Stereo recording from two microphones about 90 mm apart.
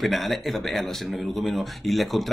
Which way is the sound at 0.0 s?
Centre (ahead or behind).